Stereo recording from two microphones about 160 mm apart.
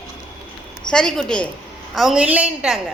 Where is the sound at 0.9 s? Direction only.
5° left (ahead or behind).